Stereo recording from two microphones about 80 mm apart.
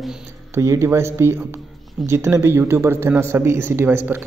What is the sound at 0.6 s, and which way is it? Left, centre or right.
A man's voice, right.